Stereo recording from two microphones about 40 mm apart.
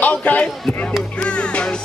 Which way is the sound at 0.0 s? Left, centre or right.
Left.